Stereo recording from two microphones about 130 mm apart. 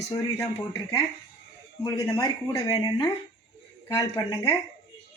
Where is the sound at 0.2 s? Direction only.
25° left (ahead or behind).